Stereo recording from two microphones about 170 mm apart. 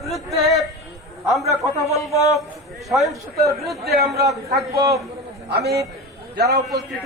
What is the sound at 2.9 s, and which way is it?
Speech, centre (ahead or behind).